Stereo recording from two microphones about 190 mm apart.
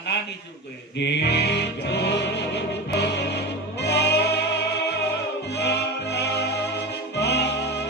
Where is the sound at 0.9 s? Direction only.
65° left (ahead or behind).